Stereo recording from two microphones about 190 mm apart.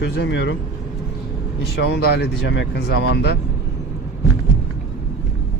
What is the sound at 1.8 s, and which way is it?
Speech, 65° left (ahead or behind).